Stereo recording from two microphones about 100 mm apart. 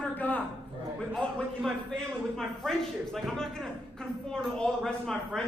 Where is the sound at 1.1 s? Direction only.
10° left (ahead or behind).